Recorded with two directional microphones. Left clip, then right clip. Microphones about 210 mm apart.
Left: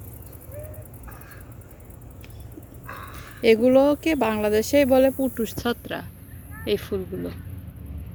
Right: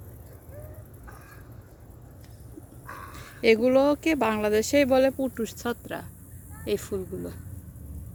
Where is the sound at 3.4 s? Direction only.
Centre (ahead or behind).